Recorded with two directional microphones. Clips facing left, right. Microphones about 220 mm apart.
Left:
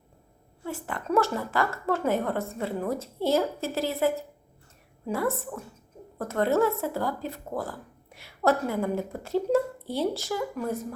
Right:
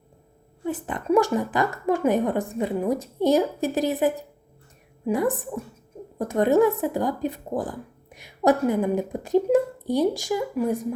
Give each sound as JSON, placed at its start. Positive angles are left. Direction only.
{"t": 0.6, "sound": "speech", "side_deg": -20}